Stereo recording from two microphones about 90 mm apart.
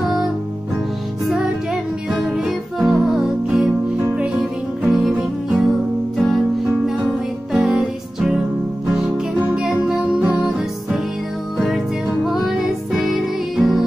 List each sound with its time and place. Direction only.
1.2 s music: 5° right (ahead or behind)
6.1 s music: centre (ahead or behind)
11.5 s music: centre (ahead or behind)